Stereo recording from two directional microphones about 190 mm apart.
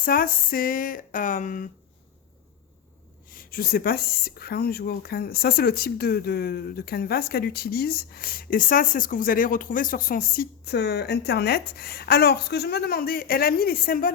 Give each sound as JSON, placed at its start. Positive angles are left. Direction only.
{"t": 0.0, "sound": "speech", "side_deg": 50}
{"t": 3.2, "sound": "speech", "side_deg": 50}